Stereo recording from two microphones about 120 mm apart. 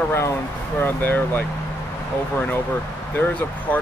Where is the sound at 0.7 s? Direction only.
15° left (ahead or behind).